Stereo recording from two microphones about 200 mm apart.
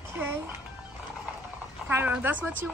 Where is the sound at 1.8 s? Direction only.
10° right (ahead or behind).